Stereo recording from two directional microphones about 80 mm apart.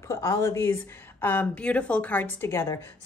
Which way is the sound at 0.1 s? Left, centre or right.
Left.